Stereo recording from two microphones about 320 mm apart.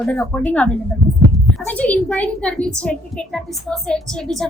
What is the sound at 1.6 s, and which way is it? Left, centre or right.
A woman's voice, centre.